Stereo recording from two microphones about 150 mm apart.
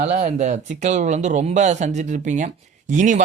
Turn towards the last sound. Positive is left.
turn(degrees=-55)  # may be behind; listen again after turning